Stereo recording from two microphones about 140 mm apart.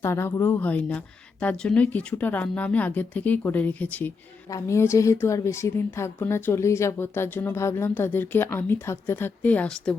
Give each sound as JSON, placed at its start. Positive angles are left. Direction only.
{"t": 0.0, "sound": "a woman's voice", "side_deg": 15}